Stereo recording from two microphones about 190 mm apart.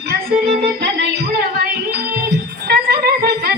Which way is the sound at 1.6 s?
55° right (ahead or behind).